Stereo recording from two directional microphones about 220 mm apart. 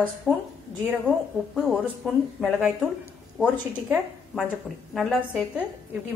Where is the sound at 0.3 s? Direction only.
10° left (ahead or behind).